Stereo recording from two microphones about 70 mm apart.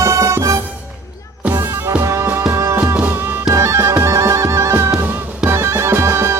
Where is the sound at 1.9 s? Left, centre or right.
Right.